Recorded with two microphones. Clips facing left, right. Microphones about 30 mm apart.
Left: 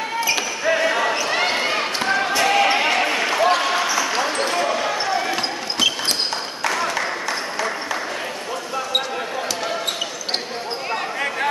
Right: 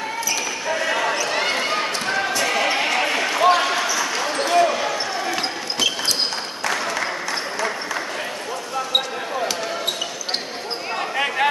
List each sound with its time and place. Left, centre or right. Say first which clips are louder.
0.2 s basketball bounce: left 5 dB; left
0.8 s basketball bounce: left 2 dB; centre
1.1 s basketball bounce: left 1 dB; centre
3.0 s a sound: even; centre
4.1 s basketball bounce: right 1 dB; centre
6.6 s applause: left 1 dB; centre